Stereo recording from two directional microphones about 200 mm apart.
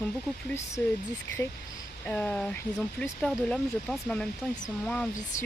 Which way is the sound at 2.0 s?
5° left (ahead or behind).